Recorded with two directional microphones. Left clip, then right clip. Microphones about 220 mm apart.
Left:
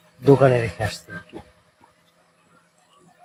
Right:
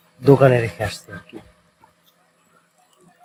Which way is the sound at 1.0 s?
30° left (ahead or behind).